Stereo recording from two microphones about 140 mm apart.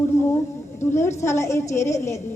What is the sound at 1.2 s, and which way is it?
A woman's voice, 20° left (ahead or behind).